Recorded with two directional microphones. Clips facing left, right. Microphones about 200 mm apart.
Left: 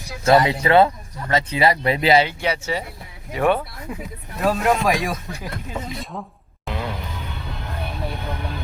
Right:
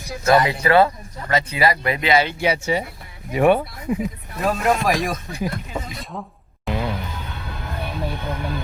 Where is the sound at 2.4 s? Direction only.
15° right (ahead or behind).